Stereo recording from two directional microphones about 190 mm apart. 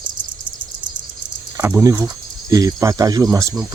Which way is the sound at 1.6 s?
15° right (ahead or behind).